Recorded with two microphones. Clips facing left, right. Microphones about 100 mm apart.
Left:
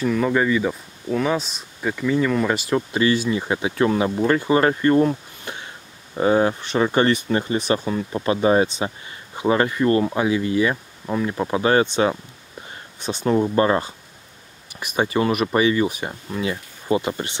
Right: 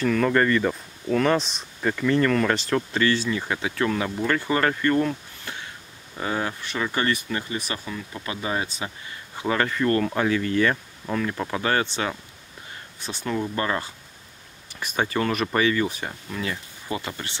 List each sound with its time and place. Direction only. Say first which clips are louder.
0.0 s speech: left 1 dB; 10° left (ahead or behind); by 8.6 s 35° left (ahead or behind)
8.6 s speech: left 7 dB; 20° left (ahead or behind)
14.7 s speech: left 4 dB; 15° left (ahead or behind)